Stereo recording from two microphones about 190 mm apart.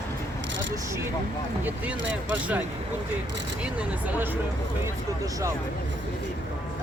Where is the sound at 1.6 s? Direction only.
10° right (ahead or behind).